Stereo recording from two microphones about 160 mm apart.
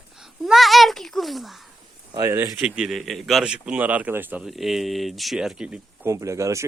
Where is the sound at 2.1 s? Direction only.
20° right (ahead or behind).